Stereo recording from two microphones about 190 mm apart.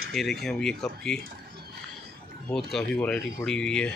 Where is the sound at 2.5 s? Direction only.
5° left (ahead or behind).